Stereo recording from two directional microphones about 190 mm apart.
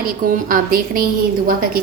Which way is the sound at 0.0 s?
50° right (ahead or behind).